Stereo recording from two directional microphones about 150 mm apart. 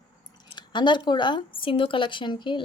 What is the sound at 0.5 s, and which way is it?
Speech, 30° left (ahead or behind).